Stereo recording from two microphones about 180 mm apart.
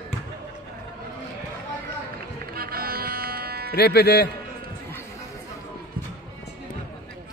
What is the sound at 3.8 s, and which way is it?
Speech, 65° left (ahead or behind).